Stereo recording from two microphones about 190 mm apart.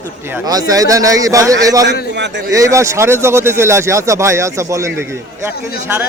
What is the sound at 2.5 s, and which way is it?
Speech, 15° right (ahead or behind).